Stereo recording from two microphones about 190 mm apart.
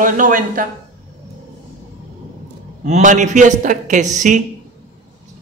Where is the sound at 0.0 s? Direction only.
45° right (ahead or behind).